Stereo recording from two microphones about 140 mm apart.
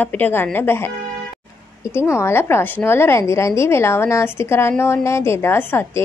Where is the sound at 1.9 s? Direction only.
20° left (ahead or behind).